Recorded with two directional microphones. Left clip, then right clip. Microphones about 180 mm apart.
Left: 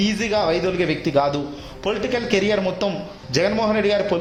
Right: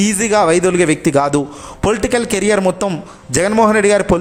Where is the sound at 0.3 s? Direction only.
35° right (ahead or behind).